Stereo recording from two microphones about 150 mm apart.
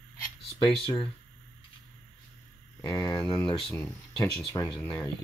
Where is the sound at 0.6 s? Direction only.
30° left (ahead or behind).